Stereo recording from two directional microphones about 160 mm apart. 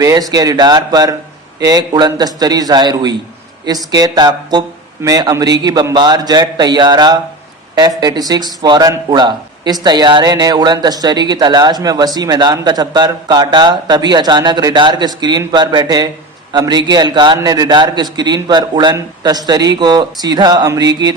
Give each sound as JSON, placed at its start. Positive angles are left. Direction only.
{"t": 0.0, "sound": "speech", "side_deg": -20}